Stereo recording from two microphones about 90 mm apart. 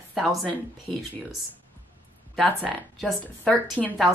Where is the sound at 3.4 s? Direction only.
15° left (ahead or behind).